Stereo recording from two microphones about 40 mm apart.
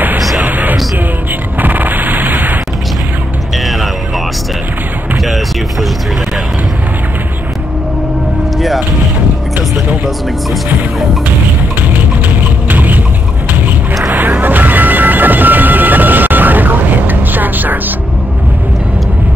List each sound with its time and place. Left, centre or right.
0.4 s music: right
1.6 s a sound: right
5.2 s a sound: centre
8.5 s music: centre
10.0 s music: centre
12.6 s vehicle: right
14.4 s music: right